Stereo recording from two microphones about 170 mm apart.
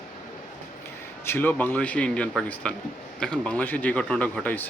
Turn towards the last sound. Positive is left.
turn(degrees=10)  # may be behind; listen again after turning